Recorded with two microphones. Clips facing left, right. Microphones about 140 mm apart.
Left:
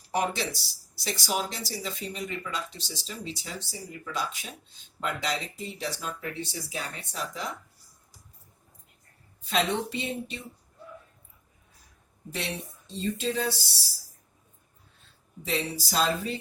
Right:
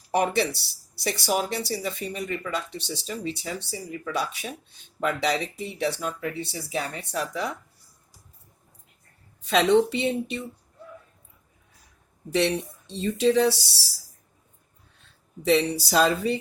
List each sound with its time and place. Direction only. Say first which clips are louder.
0.1 s speech: right 5 dB; 60° right (ahead or behind)
9.5 s speech: right 8 dB; 75° right (ahead or behind)
12.3 s speech: right 11 dB; 75° right (ahead or behind)
15.4 s speech: right 9 dB; 70° right (ahead or behind)